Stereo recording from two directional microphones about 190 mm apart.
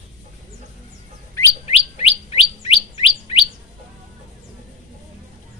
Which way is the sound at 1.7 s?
30° left (ahead or behind).